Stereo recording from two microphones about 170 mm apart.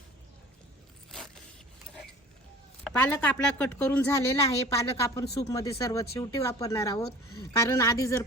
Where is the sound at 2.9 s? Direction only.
5° left (ahead or behind).